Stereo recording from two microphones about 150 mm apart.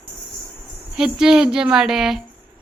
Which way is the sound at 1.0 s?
5° right (ahead or behind).